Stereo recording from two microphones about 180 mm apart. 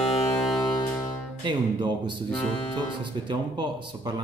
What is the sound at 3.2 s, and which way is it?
Speech, 25° right (ahead or behind).